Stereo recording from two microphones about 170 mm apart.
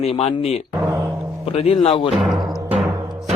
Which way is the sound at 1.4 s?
35° left (ahead or behind).